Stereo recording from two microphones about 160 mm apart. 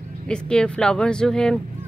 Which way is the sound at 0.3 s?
5° left (ahead or behind).